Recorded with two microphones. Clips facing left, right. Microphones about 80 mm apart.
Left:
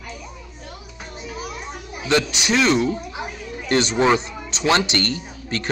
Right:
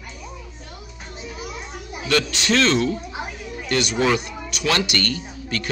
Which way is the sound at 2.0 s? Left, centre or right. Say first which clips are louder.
Left 1 dB; centre.